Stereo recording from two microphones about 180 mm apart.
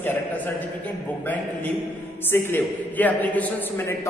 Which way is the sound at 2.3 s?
10° left (ahead or behind).